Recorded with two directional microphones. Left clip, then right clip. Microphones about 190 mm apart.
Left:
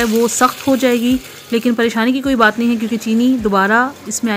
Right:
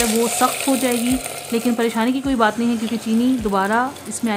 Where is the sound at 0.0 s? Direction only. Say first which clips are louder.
Left 4 dB; 15° left (ahead or behind).